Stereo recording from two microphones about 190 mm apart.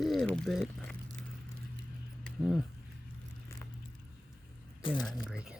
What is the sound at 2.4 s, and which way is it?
Speech, 5° right (ahead or behind).